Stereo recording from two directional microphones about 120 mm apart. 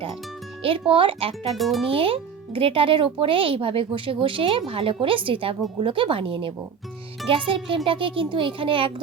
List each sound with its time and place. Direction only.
0.6 s speech: 50° right (ahead or behind)
1.5 s a child's voice: centre (ahead or behind)
1.9 s speech: 50° right (ahead or behind)